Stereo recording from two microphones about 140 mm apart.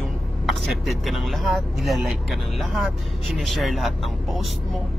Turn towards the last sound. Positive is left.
turn(degrees=0)  # may be behind; listen again after turning